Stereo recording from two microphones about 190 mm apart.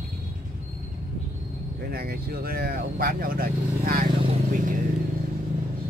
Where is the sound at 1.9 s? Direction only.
55° right (ahead or behind).